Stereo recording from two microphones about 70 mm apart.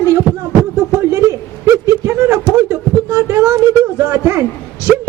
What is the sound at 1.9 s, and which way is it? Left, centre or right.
Speech, right.